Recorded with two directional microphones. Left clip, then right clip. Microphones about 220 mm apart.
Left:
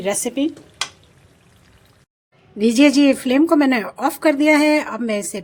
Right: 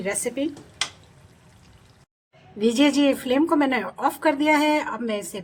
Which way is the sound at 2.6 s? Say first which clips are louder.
Left 6 dB; 30° left (ahead or behind).